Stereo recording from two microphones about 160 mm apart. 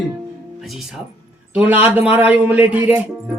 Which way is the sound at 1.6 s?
10° right (ahead or behind).